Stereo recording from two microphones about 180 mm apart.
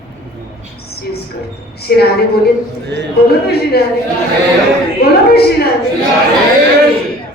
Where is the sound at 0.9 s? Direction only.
60° left (ahead or behind).